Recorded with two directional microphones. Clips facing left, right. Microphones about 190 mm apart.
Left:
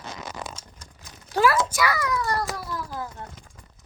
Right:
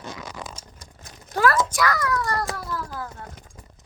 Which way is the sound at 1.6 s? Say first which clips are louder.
Right 1 dB; 10° left (ahead or behind).